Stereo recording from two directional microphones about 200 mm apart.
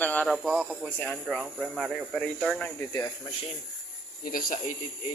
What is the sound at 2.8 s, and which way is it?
Speech, 15° left (ahead or behind).